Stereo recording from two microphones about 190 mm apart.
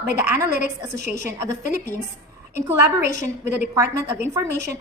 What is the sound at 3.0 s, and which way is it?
Speech, 40° left (ahead or behind).